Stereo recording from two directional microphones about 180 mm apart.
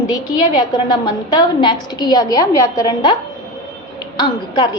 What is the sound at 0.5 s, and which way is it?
A woman's voice, 25° left (ahead or behind).